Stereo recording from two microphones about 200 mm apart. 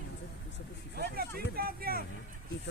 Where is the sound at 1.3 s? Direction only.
50° right (ahead or behind).